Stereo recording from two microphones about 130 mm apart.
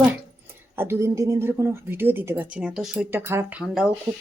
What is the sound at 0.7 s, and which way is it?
Speech, 20° right (ahead or behind).